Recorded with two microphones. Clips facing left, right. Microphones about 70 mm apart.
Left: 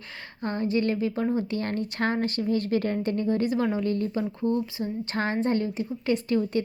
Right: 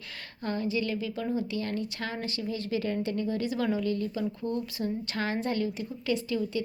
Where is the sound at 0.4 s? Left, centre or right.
Left.